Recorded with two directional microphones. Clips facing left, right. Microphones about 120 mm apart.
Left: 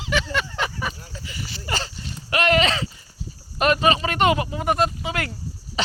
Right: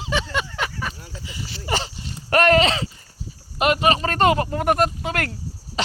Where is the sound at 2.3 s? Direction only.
45° right (ahead or behind).